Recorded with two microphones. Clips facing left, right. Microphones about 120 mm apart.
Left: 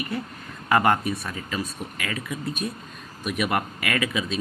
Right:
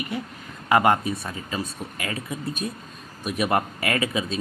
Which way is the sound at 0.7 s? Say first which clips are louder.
Right 1 dB; 20° right (ahead or behind).